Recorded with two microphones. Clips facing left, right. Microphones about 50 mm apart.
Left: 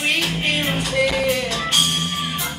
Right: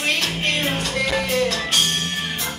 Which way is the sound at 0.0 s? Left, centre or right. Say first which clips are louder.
Left 1 dB; centre.